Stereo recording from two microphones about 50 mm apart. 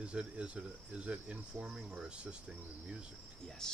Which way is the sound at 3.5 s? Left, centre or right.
Centre.